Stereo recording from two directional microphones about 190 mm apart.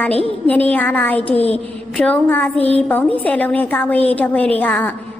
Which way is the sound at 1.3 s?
35° left (ahead or behind).